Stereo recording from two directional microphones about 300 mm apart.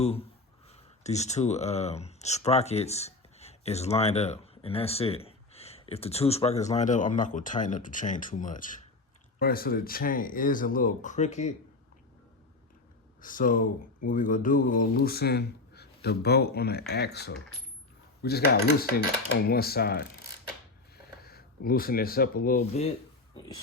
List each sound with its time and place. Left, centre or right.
0.0 s speech: centre
13.2 s speech: left